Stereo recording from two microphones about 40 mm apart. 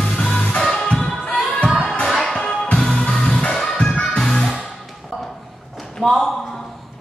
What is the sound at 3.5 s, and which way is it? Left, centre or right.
Music, centre.